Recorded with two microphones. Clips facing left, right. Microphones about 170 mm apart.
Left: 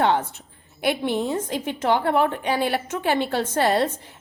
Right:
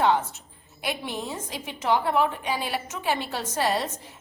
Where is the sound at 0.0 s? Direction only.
60° left (ahead or behind).